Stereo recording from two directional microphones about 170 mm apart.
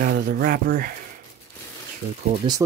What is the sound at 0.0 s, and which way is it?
Speech, 60° right (ahead or behind).